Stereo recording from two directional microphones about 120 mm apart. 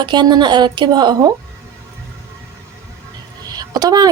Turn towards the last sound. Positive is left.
turn(degrees=-35)  # may be behind; listen again after turning